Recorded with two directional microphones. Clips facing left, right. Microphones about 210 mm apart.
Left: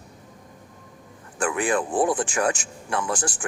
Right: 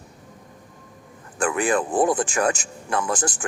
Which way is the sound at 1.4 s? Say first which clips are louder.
Right 2 dB; 40° right (ahead or behind).